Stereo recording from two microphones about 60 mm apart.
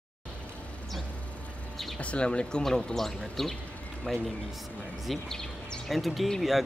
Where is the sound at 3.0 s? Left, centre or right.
Centre.